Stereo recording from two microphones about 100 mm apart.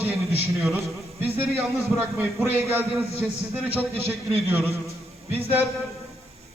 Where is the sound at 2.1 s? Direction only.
20° right (ahead or behind).